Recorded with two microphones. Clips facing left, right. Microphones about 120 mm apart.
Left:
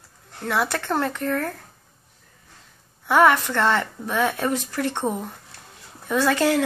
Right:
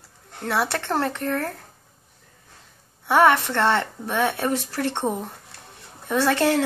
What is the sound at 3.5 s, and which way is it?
Speech, 30° right (ahead or behind).